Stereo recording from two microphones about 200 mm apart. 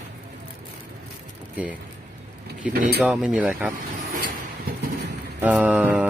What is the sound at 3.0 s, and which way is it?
Speech, 5° right (ahead or behind).